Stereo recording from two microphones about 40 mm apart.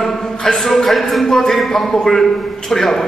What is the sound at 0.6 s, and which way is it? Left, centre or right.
A man's voice, centre.